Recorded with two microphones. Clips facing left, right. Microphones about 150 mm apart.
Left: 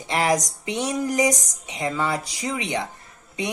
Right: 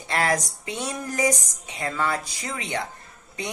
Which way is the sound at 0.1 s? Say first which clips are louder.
Left 3 dB; 15° left (ahead or behind).